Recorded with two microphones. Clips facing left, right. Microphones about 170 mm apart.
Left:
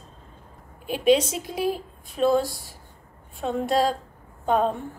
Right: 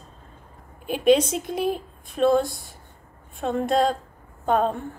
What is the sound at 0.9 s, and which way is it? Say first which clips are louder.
Speech: right 1 dB; 55° right (ahead or behind).